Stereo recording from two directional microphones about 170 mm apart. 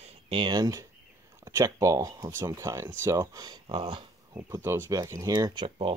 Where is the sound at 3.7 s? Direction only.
30° right (ahead or behind).